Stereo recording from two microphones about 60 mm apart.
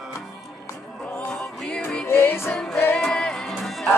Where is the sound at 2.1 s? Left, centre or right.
Left.